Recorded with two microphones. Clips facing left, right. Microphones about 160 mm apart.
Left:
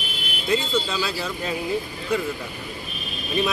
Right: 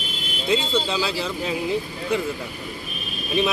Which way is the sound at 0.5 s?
15° right (ahead or behind).